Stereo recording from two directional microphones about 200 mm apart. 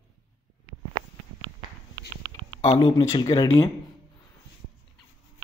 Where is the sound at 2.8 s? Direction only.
25° left (ahead or behind).